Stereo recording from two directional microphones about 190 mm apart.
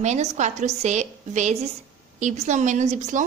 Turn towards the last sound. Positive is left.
turn(degrees=-40)  # may be behind; listen again after turning